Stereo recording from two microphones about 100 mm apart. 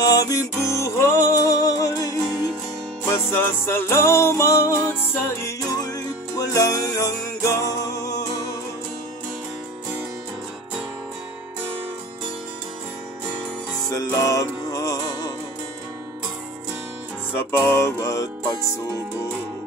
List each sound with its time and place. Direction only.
0.0 s music: 35° left (ahead or behind)
3.1 s music: 25° left (ahead or behind)
5.8 s music: 40° left (ahead or behind)
13.8 s music: 35° left (ahead or behind)
17.3 s music: 20° left (ahead or behind)